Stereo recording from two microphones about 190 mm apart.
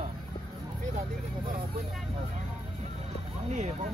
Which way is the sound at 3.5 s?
40° right (ahead or behind).